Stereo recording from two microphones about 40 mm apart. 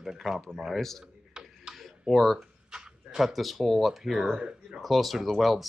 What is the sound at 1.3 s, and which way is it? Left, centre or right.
Tick-tock, centre.